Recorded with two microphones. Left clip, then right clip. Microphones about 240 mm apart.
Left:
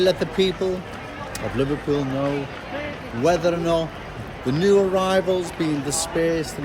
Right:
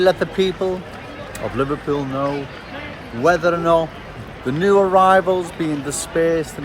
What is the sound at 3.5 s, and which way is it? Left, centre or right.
Speech, centre.